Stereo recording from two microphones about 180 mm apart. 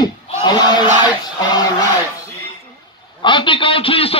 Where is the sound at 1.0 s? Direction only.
20° left (ahead or behind).